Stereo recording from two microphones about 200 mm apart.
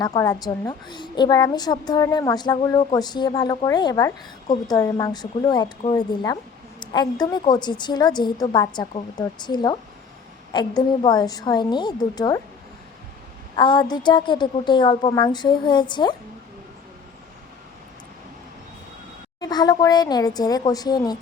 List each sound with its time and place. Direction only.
0.0 s a woman's voice: 15° left (ahead or behind)
13.6 s a woman's voice: 20° left (ahead or behind)
19.4 s a woman's voice: 20° left (ahead or behind)